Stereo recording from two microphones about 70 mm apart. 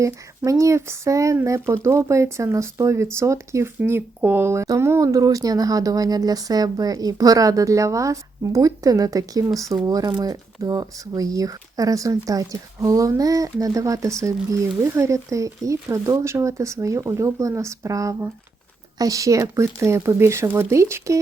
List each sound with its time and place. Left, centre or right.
0.0 s speech: right
3.8 s speech: right